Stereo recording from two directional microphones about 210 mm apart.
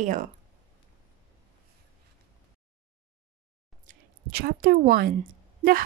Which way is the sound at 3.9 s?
45° right (ahead or behind).